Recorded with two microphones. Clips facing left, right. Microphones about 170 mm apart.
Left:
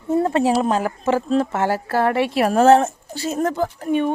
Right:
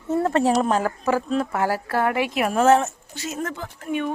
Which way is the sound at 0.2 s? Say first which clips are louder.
Left 1 dB; 15° left (ahead or behind).